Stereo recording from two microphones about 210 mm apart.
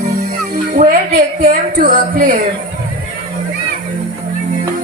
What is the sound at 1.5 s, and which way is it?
Speech, 40° right (ahead or behind).